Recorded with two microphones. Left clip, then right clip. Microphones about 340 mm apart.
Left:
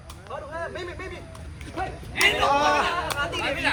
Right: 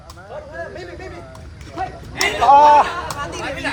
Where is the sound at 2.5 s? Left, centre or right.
Right.